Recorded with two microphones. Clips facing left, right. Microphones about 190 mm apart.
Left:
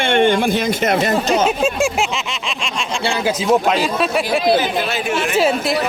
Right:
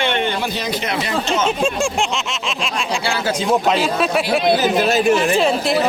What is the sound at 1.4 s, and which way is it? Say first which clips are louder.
Speech: left 2 dB; 5° left (ahead or behind).